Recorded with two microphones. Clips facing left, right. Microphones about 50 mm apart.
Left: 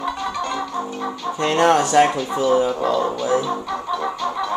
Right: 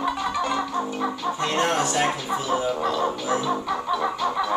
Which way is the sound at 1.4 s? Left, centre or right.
Left.